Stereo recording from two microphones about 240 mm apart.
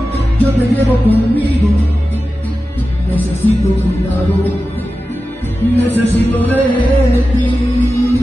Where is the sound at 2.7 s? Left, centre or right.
Centre.